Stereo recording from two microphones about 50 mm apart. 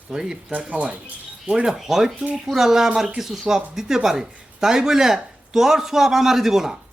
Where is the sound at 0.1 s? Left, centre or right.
Centre.